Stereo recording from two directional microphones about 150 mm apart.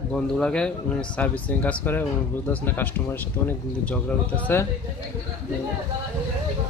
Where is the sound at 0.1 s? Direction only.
5° left (ahead or behind).